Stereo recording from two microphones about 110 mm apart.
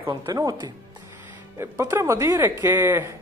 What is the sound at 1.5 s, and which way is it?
A woman's voice, 25° right (ahead or behind).